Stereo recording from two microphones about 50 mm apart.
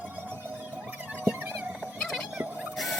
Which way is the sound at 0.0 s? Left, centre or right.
Right.